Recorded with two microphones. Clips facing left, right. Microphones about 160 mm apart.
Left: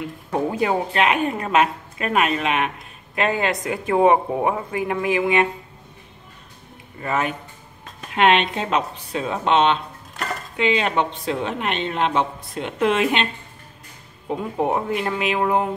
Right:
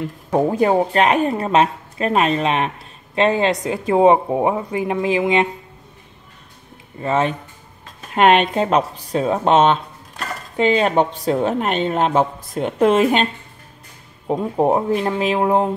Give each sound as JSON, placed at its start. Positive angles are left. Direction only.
{"t": 0.3, "sound": "a woman's voice", "side_deg": -45}
{"t": 7.0, "sound": "speech", "side_deg": -25}
{"t": 8.1, "sound": "a woman's voice", "side_deg": -45}